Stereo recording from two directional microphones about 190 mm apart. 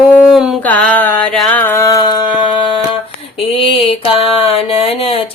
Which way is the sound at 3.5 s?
30° left (ahead or behind).